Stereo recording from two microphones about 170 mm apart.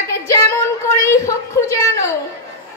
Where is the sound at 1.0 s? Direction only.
15° left (ahead or behind).